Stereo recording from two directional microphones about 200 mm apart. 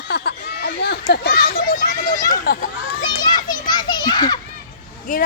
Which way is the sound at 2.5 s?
50° left (ahead or behind).